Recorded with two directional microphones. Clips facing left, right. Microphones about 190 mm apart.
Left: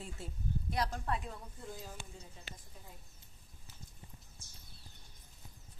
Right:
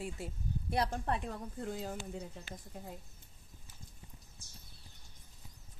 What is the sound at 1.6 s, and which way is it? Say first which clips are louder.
Speech: right 8 dB; 65° right (ahead or behind).